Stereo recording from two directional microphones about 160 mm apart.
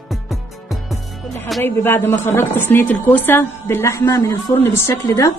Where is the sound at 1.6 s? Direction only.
15° left (ahead or behind).